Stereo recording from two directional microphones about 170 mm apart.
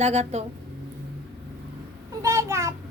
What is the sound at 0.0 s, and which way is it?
Speech, 40° right (ahead or behind).